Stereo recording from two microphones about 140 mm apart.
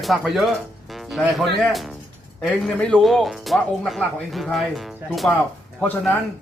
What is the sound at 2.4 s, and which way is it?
A man's voice, 5° left (ahead or behind).